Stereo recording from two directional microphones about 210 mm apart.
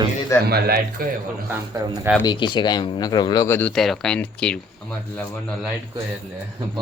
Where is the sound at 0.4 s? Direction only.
45° right (ahead or behind).